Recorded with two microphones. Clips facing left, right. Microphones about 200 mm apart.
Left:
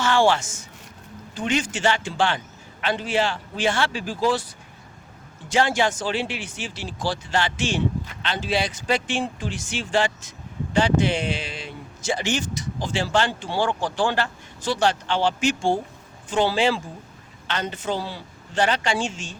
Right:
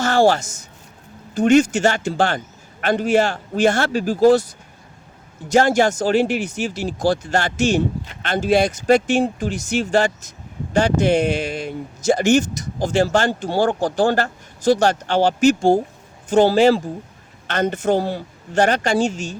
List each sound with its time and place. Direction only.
0.0 s a woman's voice: 40° right (ahead or behind)
5.5 s speech: 40° right (ahead or behind)